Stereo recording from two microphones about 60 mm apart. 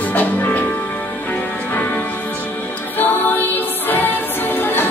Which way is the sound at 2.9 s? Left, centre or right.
Left.